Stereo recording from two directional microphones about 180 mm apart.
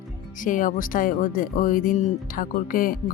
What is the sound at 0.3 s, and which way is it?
Speech, 50° left (ahead or behind).